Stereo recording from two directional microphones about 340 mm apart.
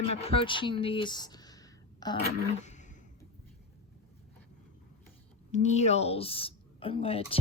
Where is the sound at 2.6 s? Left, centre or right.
Left.